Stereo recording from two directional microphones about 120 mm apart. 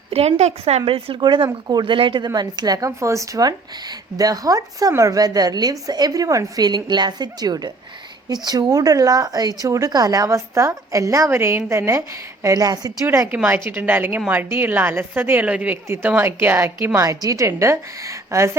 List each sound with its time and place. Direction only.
0.1 s a woman's voice: 60° right (ahead or behind)
0.9 s a woman's voice: 50° right (ahead or behind); by 12.9 s 30° right (ahead or behind)
13.1 s a woman's voice: 15° right (ahead or behind)